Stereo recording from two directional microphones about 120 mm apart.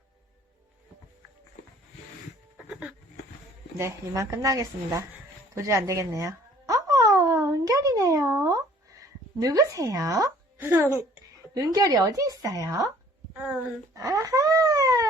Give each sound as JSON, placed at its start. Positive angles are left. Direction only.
{"t": 2.6, "sound": "a sound", "side_deg": -5}
{"t": 3.8, "sound": "a woman's voice", "side_deg": -25}
{"t": 5.5, "sound": "a sound", "side_deg": -25}
{"t": 10.7, "sound": "a woman's voice", "side_deg": -20}
{"t": 11.5, "sound": "a woman's voice", "side_deg": -30}
{"t": 13.3, "sound": "speech", "side_deg": -10}
{"t": 13.9, "sound": "wail", "side_deg": -25}